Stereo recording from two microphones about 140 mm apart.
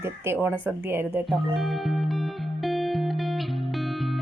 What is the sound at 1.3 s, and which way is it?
Music, centre (ahead or behind).